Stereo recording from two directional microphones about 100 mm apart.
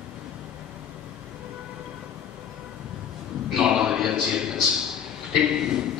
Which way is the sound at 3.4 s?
5° right (ahead or behind).